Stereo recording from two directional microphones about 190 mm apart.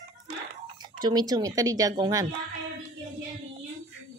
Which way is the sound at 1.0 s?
20° right (ahead or behind).